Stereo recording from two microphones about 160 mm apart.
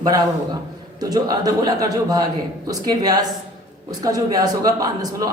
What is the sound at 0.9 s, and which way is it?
A man's voice, 25° right (ahead or behind).